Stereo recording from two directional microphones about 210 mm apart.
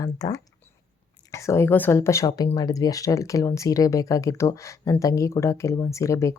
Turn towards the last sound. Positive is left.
turn(degrees=15)  # may be behind; listen again after turning